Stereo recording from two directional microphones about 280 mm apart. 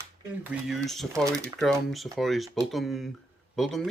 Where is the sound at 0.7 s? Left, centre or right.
Centre.